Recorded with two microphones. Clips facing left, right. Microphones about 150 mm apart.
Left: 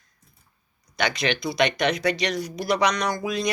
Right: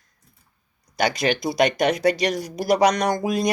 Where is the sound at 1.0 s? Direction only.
45° right (ahead or behind).